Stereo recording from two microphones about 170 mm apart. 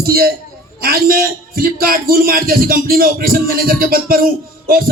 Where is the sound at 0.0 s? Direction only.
65° right (ahead or behind).